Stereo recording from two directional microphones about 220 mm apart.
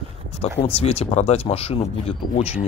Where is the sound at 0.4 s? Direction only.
25° left (ahead or behind).